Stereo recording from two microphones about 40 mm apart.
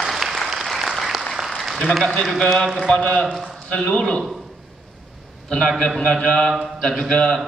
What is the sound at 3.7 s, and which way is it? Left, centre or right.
Speech, centre.